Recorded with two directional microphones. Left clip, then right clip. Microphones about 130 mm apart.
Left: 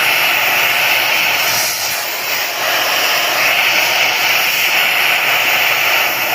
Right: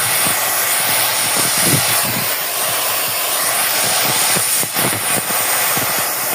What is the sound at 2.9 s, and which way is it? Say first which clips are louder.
Vehicle: left 6 dB; 30° right (ahead or behind).